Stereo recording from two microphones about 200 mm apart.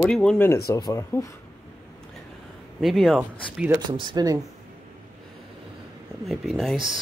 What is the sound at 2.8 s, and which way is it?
Speech, centre (ahead or behind).